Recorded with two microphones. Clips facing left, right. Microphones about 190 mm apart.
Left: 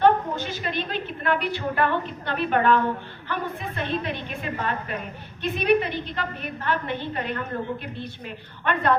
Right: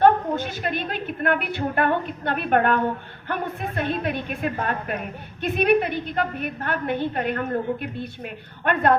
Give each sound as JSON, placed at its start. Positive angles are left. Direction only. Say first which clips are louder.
{"t": 0.0, "sound": "a woman's voice", "louder": "right 2 dB", "side_deg": -55}